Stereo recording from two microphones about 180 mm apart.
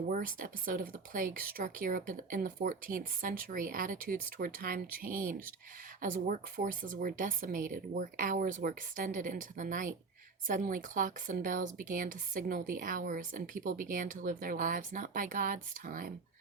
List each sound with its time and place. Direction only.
0.1 s speech: 50° right (ahead or behind)